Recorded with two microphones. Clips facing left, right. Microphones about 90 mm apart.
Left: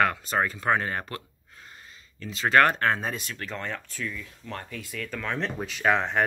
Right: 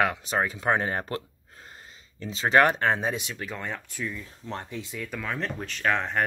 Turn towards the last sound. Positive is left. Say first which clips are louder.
# left 2 dB
turn(degrees=0)  # may be behind; listen again after turning